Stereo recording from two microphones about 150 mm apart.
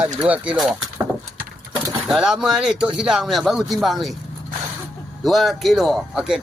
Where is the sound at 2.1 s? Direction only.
5° right (ahead or behind).